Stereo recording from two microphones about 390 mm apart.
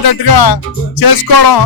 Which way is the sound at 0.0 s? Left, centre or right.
Left.